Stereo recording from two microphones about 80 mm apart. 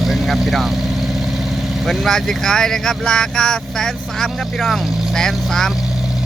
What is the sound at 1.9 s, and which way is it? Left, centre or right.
Speech, centre.